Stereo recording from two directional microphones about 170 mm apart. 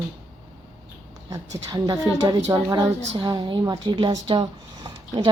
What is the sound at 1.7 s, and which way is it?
A woman's voice, 20° right (ahead or behind).